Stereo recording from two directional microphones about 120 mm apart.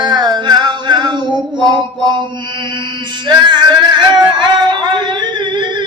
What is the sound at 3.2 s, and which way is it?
Music, 40° right (ahead or behind).